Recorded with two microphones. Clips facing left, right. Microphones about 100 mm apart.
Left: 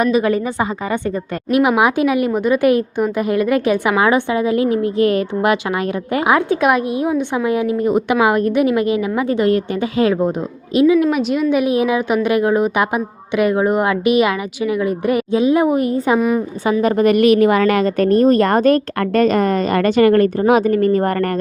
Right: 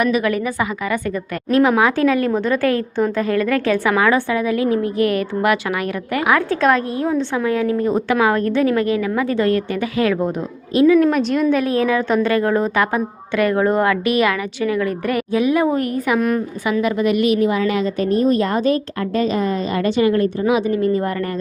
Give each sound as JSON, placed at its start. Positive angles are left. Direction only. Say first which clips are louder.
{"t": 0.0, "sound": "a woman's voice", "louder": "left 2 dB", "side_deg": 30}
{"t": 1.5, "sound": "a woman's voice", "louder": "left 1 dB", "side_deg": 15}
{"t": 10.8, "sound": "a woman's voice", "louder": "even", "side_deg": 10}
{"t": 16.8, "sound": "a woman's voice", "louder": "left 5 dB", "side_deg": 50}